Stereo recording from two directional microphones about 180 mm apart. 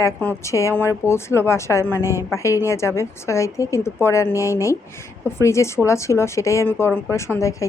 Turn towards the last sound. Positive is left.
turn(degrees=15)  # may be behind; listen again after turning